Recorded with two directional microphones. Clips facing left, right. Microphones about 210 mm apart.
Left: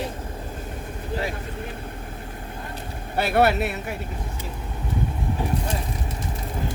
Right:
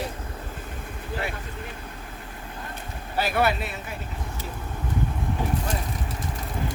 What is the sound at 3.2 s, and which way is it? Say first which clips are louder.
Speech: left 4 dB; 60° left (ahead or behind).